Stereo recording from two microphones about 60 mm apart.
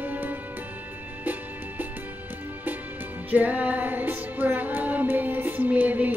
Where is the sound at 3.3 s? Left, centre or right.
Right.